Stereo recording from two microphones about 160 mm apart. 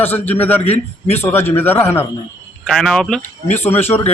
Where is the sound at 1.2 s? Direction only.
15° left (ahead or behind).